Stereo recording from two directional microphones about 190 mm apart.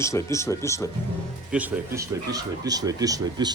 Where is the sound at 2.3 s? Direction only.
20° right (ahead or behind).